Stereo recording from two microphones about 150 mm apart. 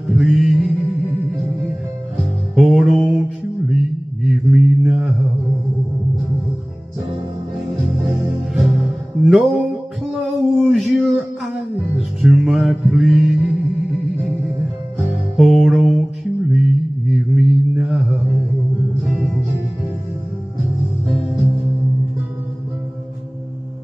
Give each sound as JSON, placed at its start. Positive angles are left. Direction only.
{"t": 0.1, "sound": "music", "side_deg": 0}
{"t": 2.5, "sound": "music", "side_deg": 0}
{"t": 3.6, "sound": "mantra", "side_deg": 0}
{"t": 8.5, "sound": "music", "side_deg": 0}
{"t": 10.1, "sound": "a sound", "side_deg": 0}
{"t": 12.2, "sound": "music", "side_deg": 0}
{"t": 15.3, "sound": "music", "side_deg": 0}
{"t": 16.5, "sound": "mantra", "side_deg": 0}
{"t": 19.0, "sound": "music", "side_deg": 0}